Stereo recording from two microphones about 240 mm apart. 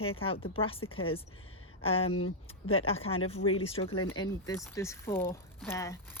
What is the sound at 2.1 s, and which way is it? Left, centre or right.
Speech, left.